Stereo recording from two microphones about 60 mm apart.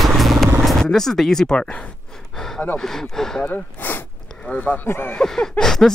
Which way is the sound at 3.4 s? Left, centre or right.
Left.